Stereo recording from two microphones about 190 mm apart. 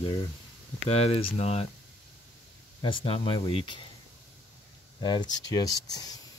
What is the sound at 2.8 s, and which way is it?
Speech, 25° left (ahead or behind).